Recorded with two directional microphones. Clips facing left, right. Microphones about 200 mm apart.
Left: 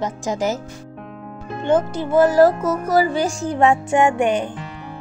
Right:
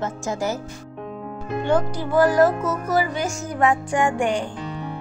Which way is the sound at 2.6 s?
40° left (ahead or behind).